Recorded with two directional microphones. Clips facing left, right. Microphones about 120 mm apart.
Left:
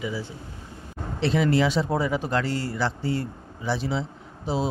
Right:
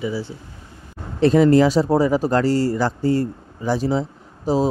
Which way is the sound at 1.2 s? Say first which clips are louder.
Right 8 dB; 45° right (ahead or behind).